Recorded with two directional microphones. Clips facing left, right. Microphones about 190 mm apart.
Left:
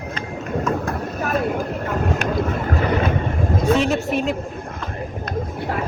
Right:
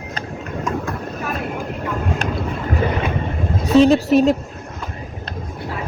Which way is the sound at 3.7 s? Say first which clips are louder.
Right 12 dB; 35° right (ahead or behind).